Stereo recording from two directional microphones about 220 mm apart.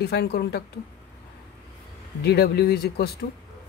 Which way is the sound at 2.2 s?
45° left (ahead or behind).